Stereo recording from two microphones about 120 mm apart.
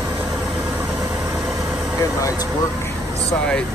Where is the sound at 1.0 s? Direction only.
30° right (ahead or behind).